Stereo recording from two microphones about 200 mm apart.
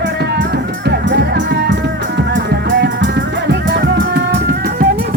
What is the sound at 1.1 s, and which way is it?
Music, 60° right (ahead or behind).